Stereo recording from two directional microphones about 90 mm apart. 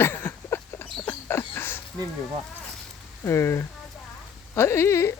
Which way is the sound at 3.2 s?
30° left (ahead or behind).